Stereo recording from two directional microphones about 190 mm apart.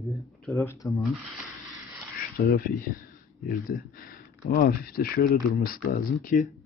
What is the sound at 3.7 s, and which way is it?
Speech, 50° left (ahead or behind).